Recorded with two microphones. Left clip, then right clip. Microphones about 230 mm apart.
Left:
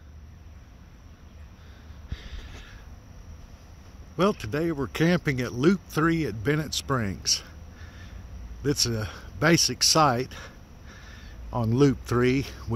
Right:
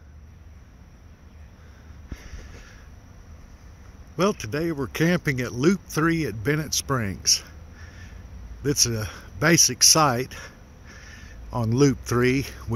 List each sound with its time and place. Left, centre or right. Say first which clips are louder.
4.2 s speech: right 1 dB; centre
8.6 s speech: right 3 dB; centre